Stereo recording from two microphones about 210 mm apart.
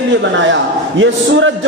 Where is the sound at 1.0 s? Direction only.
65° right (ahead or behind).